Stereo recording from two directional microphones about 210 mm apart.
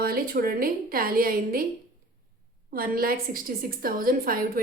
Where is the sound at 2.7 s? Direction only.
45° right (ahead or behind).